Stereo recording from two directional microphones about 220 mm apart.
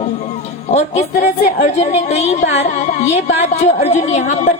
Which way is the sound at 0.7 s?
30° left (ahead or behind).